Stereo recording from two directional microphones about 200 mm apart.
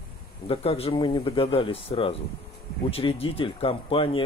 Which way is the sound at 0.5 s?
30° left (ahead or behind).